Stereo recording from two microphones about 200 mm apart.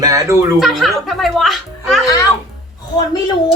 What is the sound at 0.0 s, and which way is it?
Speech, 15° right (ahead or behind).